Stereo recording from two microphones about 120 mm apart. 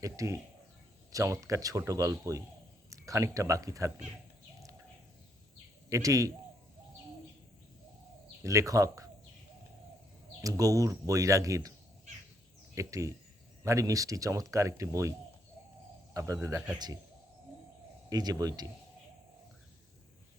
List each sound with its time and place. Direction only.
0.0 s speech: 25° right (ahead or behind)
5.9 s speech: 25° right (ahead or behind)
8.4 s speech: 25° right (ahead or behind)
10.4 s speech: 30° right (ahead or behind)
12.7 s speech: 25° right (ahead or behind)
16.1 s speech: 30° right (ahead or behind)
18.1 s speech: 30° right (ahead or behind)